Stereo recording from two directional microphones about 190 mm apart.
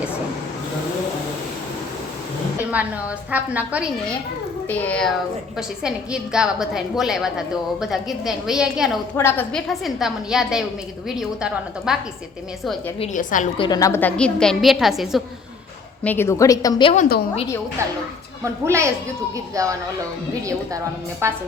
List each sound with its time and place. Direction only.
2.6 s a woman's voice: 5° right (ahead or behind)
4.7 s a woman's voice: 10° left (ahead or behind)
9.1 s a woman's voice: 10° left (ahead or behind); by 11.9 s 5° right (ahead or behind)
13.0 s a woman's voice: 40° left (ahead or behind)
13.6 s a woman's voice: 20° left (ahead or behind); by 15.2 s centre (ahead or behind)
16.0 s a woman's voice: 10° left (ahead or behind)
17.8 s a woman's voice: 15° right (ahead or behind)